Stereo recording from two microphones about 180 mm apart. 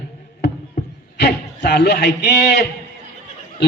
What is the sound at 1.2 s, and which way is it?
A man's voice, 65° left (ahead or behind).